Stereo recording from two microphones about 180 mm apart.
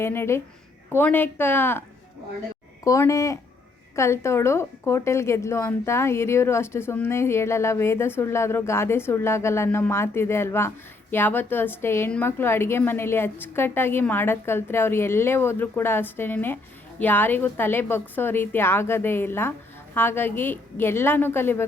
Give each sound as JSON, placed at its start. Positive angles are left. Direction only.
{"t": 0.0, "sound": "a woman's voice", "side_deg": 15}
{"t": 2.8, "sound": "a woman's voice", "side_deg": 15}